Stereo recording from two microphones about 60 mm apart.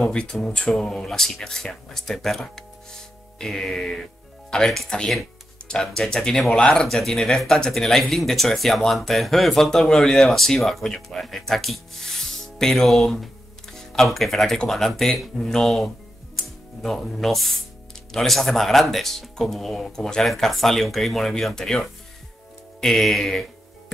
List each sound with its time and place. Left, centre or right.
0.0 s speech: centre